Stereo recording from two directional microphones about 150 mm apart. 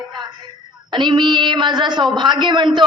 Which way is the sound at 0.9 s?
30° right (ahead or behind).